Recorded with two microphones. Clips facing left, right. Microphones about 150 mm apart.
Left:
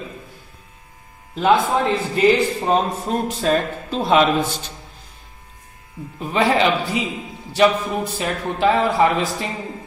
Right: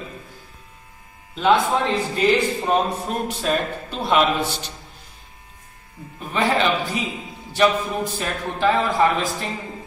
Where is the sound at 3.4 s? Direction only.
35° left (ahead or behind).